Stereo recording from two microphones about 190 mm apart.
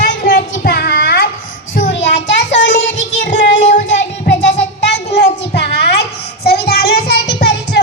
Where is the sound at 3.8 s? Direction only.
70° left (ahead or behind).